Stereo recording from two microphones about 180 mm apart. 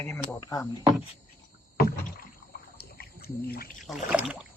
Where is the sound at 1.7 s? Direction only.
55° left (ahead or behind).